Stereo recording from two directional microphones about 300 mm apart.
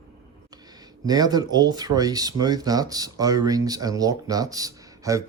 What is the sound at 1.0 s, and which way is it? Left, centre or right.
Speech, centre.